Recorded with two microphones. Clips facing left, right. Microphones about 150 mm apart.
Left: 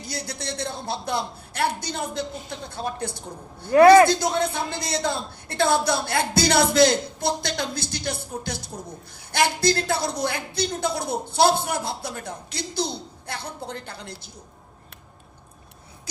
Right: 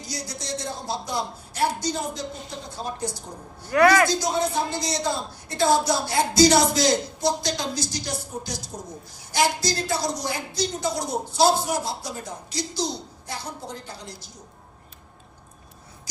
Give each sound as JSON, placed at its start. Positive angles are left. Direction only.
{"t": 0.1, "sound": "a man's voice", "side_deg": 60}
{"t": 3.7, "sound": "a man's voice", "side_deg": 30}
{"t": 4.1, "sound": "a man's voice", "side_deg": 60}